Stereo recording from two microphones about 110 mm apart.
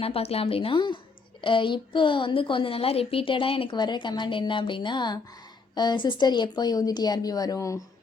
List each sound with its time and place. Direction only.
0.0 s a woman's voice: 65° left (ahead or behind); by 7.8 s 30° left (ahead or behind)